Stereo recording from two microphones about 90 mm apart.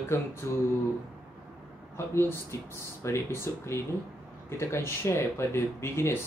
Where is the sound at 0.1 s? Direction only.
30° left (ahead or behind).